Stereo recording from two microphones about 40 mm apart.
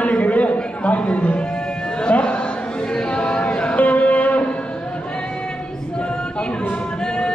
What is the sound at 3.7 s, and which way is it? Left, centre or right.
Music, left.